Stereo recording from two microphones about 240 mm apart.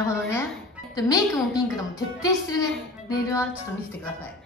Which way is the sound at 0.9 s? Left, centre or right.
Centre.